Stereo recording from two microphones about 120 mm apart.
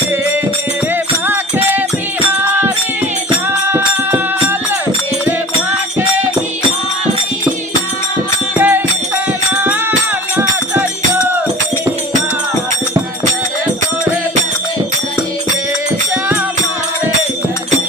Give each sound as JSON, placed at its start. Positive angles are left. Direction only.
{"t": 1.3, "sound": "music", "side_deg": -15}
{"t": 3.7, "sound": "music", "side_deg": -20}
{"t": 8.5, "sound": "music", "side_deg": -15}